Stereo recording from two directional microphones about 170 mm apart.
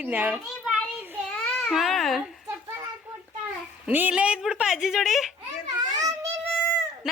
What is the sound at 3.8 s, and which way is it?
A woman's voice, 10° right (ahead or behind).